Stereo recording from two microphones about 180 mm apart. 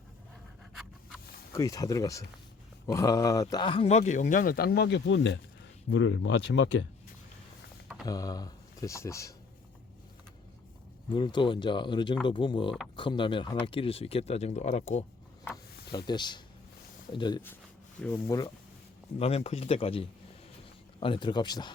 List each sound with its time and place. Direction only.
0.7 s a sound: centre (ahead or behind)
1.5 s speech: 20° left (ahead or behind); by 6.7 s 90° left
8.0 s speech: 20° left (ahead or behind)
11.1 s speech: 25° left (ahead or behind)
15.9 s speech: 25° left (ahead or behind)
18.0 s speech: 15° left (ahead or behind)
19.2 s speech: 35° left (ahead or behind)